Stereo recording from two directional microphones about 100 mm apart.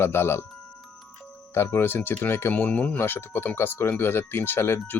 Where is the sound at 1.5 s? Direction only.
25° left (ahead or behind).